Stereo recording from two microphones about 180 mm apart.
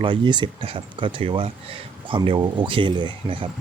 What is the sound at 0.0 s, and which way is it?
Speech, 25° right (ahead or behind).